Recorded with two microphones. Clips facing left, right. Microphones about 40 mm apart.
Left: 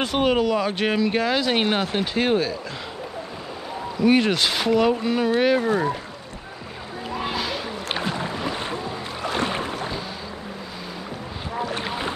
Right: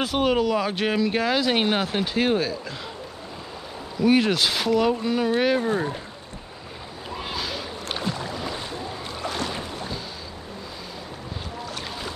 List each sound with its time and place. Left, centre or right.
0.0 s speech: centre
4.0 s speech: centre
5.6 s speech: left
7.2 s a sound: centre
7.9 s boat: left
11.6 s boat: left